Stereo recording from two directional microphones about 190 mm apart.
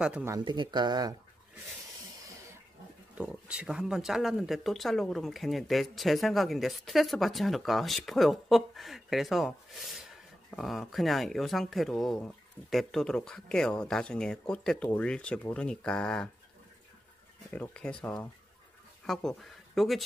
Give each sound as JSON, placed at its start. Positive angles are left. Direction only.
{"t": 0.0, "sound": "speech", "side_deg": -10}
{"t": 0.4, "sound": "speech", "side_deg": -25}
{"t": 3.2, "sound": "speech", "side_deg": -5}
{"t": 17.5, "sound": "speech", "side_deg": 5}